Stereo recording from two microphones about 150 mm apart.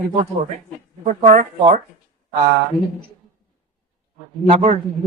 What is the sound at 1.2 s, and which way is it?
Speech, 60° right (ahead or behind).